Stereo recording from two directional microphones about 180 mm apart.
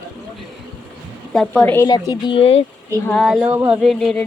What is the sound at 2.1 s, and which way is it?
Speech, 30° left (ahead or behind).